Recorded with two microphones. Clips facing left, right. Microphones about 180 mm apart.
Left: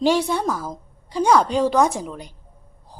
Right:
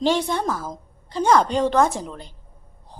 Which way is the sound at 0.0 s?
10° left (ahead or behind).